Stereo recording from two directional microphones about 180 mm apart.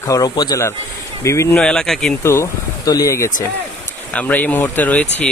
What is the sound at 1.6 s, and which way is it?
Speech, 5° left (ahead or behind).